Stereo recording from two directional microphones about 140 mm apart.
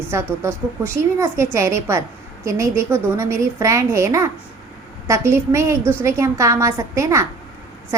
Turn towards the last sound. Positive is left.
turn(degrees=-20)  # may be behind; listen again after turning